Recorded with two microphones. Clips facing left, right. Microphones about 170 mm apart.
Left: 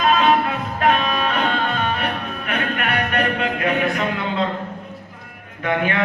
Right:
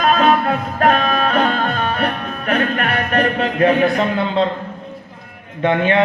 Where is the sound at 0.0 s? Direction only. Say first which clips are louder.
Right 2 dB; 40° right (ahead or behind).